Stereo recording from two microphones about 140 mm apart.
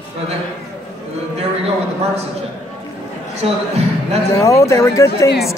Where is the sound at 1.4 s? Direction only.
45° right (ahead or behind).